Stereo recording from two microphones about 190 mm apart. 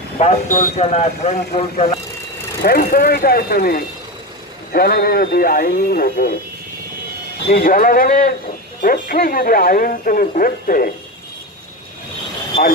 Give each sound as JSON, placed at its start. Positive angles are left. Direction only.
{"t": 0.2, "sound": "speech", "side_deg": 40}
{"t": 2.6, "sound": "speech", "side_deg": 50}
{"t": 7.5, "sound": "speech", "side_deg": 50}